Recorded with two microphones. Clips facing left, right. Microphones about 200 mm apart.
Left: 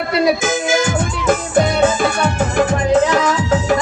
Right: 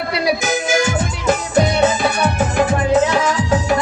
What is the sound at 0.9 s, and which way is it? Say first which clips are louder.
Music: left 1 dB; 50° left (ahead or behind).